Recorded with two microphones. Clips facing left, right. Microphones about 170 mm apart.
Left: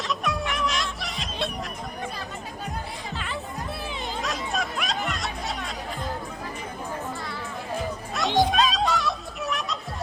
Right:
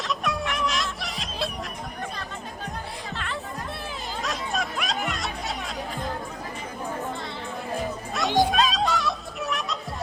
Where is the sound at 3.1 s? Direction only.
Centre (ahead or behind).